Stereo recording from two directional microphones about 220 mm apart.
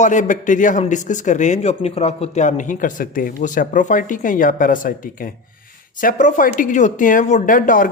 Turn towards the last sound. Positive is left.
turn(degrees=40)  # may be behind; listen again after turning